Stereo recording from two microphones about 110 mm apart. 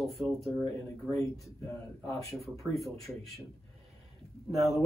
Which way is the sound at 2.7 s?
Centre (ahead or behind).